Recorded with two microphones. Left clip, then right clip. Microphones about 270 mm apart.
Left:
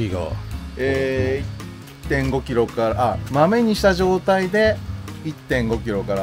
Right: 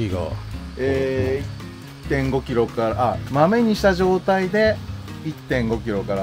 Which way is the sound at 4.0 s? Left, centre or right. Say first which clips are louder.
Left 1 dB; left.